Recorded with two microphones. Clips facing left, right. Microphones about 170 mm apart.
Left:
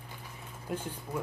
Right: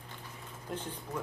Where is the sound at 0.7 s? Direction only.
10° left (ahead or behind).